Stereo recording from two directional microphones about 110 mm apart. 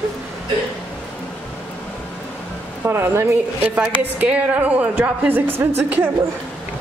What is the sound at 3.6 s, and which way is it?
A woman's voice, 10° right (ahead or behind).